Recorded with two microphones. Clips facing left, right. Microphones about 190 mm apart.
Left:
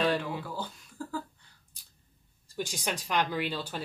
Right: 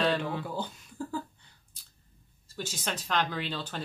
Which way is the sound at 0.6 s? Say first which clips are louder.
Right 2 dB; 20° right (ahead or behind).